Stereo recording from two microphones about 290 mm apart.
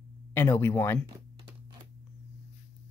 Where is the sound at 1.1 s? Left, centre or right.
Centre.